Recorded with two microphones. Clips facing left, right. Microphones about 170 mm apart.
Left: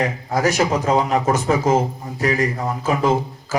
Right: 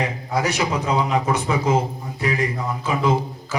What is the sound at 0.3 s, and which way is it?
A man's voice, 45° left (ahead or behind).